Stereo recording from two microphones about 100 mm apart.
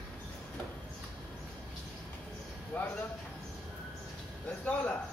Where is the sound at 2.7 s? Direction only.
15° left (ahead or behind).